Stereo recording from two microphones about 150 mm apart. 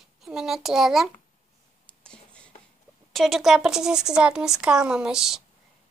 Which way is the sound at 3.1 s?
Centre (ahead or behind).